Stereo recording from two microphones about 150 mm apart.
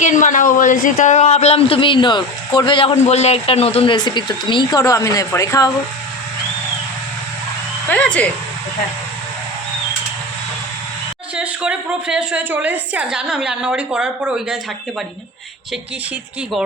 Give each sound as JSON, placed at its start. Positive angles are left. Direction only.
{"t": 0.0, "sound": "speech", "side_deg": 55}
{"t": 2.9, "sound": "speech", "side_deg": 45}
{"t": 7.9, "sound": "speech", "side_deg": 10}
{"t": 11.3, "sound": "a woman's voice", "side_deg": -5}